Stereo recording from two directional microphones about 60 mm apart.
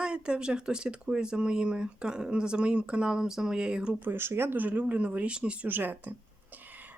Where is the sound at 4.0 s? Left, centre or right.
Right; by 5.7 s centre.